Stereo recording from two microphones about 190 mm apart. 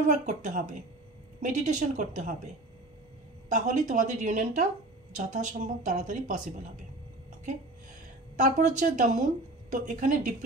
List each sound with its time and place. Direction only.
0.3 s speech: 40° right (ahead or behind)
8.4 s speech: 40° right (ahead or behind)